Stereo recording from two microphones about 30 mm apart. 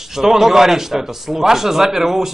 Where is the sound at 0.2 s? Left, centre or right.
Centre.